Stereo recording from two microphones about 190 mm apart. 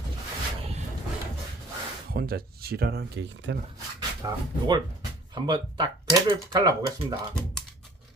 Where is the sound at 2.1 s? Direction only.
55° right (ahead or behind); by 3.5 s 75° right (ahead or behind).